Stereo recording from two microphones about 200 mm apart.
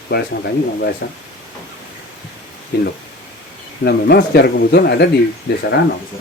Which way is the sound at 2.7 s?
55° left (ahead or behind).